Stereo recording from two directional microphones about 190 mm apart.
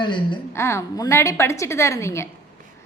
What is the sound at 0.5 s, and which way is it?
A woman's voice, 15° left (ahead or behind).